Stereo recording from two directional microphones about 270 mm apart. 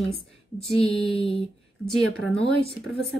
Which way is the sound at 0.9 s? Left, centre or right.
Centre.